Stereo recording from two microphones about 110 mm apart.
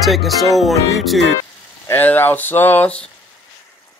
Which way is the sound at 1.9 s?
15° left (ahead or behind).